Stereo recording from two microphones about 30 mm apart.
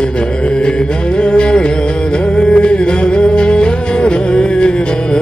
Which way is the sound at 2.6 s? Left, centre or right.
Left.